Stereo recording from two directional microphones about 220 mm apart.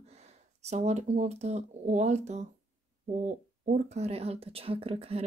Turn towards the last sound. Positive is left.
turn(degrees=-25)  # may be behind; listen again after turning